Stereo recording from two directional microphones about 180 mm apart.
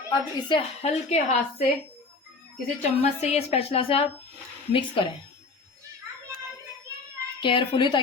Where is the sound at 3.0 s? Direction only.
35° left (ahead or behind).